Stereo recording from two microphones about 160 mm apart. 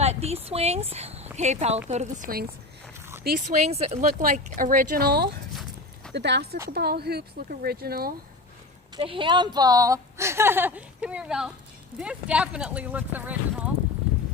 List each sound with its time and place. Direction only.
0.0 s speech: 40° right (ahead or behind); by 2.5 s 65° right (ahead or behind)
3.2 s speech: 50° right (ahead or behind)
4.2 s speech: 55° right (ahead or behind); by 5.3 s 75° right (ahead or behind)
6.1 s speech: 90° right; by 8.1 s 70° right (ahead or behind)
9.0 s a woman's voice: 30° right (ahead or behind); by 13.7 s 10° right (ahead or behind)